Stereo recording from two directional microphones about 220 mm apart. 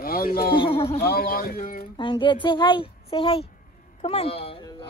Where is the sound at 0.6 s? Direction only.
25° left (ahead or behind).